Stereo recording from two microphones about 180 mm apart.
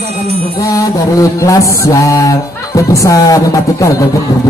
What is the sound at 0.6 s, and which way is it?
Music, 20° left (ahead or behind).